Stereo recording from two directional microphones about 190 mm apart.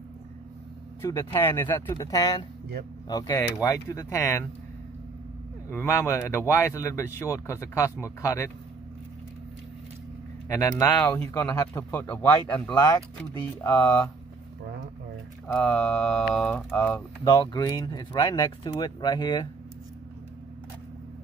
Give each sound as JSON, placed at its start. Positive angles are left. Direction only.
{"t": 1.0, "sound": "a man's voice", "side_deg": 15}
{"t": 5.7, "sound": "a man's voice", "side_deg": 15}
{"t": 10.8, "sound": "a man's voice", "side_deg": 10}
{"t": 15.4, "sound": "speech", "side_deg": 5}
{"t": 17.3, "sound": "speech", "side_deg": 20}